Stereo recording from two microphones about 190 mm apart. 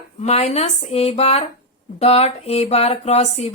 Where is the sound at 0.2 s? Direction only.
35° left (ahead or behind).